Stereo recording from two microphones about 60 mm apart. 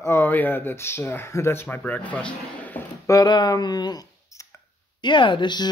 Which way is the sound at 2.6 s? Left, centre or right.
Left.